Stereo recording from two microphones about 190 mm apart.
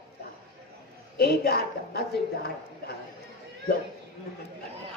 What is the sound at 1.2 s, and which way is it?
Speech, 55° left (ahead or behind).